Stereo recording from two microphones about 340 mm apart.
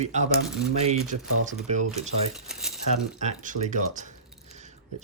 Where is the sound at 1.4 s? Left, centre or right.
Right.